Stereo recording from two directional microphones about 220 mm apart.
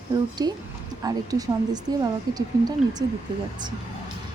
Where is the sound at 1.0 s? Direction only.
15° right (ahead or behind).